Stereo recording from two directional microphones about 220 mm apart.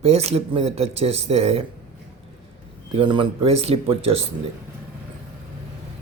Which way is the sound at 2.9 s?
20° right (ahead or behind).